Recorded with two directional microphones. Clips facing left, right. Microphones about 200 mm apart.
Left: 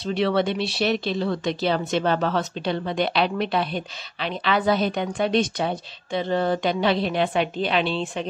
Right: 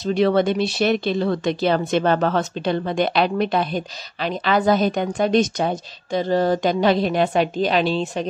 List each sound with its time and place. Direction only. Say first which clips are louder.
0.0 s speech: right 4 dB; 45° right (ahead or behind)